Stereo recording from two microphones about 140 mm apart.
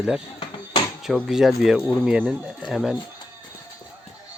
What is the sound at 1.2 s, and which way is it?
Speech, centre (ahead or behind).